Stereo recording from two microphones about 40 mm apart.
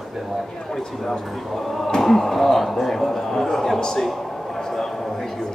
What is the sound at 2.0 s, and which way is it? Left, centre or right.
Speech, centre.